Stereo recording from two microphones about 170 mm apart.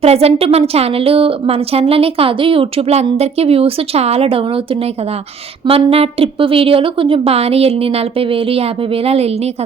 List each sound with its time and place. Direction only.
0.0 s a woman's voice: 35° right (ahead or behind)